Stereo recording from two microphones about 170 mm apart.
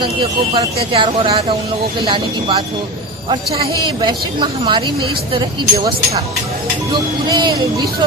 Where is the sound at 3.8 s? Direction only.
25° right (ahead or behind).